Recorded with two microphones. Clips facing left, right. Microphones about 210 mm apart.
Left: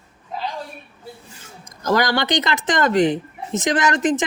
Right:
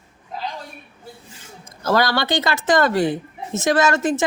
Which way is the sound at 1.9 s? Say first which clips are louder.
Even; 15° left (ahead or behind).